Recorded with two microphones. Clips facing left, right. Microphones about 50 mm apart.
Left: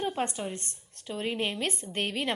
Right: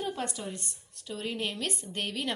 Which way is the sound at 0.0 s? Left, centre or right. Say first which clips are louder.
Left 3 dB; left.